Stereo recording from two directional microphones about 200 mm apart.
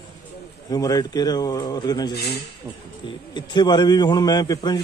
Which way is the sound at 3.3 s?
20° left (ahead or behind).